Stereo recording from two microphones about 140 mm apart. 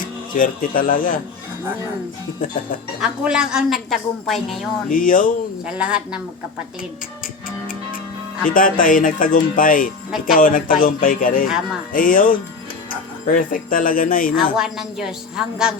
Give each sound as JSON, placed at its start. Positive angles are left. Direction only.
{"t": 0.3, "sound": "speech", "side_deg": 75}
{"t": 3.0, "sound": "a woman's voice", "side_deg": -5}
{"t": 4.9, "sound": "speech", "side_deg": 75}
{"t": 5.6, "sound": "a woman's voice", "side_deg": -5}
{"t": 8.4, "sound": "speech", "side_deg": 80}
{"t": 11.4, "sound": "a woman's voice", "side_deg": -5}
{"t": 11.9, "sound": "speech", "side_deg": 80}
{"t": 14.5, "sound": "a woman's voice", "side_deg": -5}